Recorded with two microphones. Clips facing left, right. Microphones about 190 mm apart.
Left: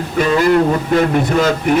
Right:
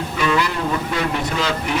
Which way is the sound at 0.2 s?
45° left (ahead or behind).